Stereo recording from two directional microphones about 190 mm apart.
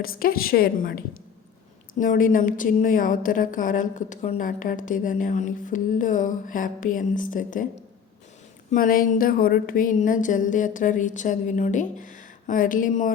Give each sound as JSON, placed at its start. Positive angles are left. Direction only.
{"t": 0.0, "sound": "a woman's voice", "side_deg": 50}
{"t": 8.7, "sound": "a woman's voice", "side_deg": 45}